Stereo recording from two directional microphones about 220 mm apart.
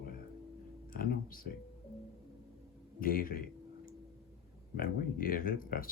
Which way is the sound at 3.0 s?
40° left (ahead or behind).